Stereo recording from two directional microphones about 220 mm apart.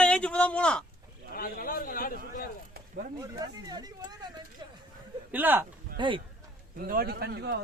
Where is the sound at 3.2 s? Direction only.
15° right (ahead or behind).